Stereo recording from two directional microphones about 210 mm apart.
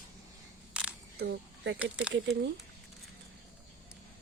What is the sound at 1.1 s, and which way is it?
Speech, 50° right (ahead or behind).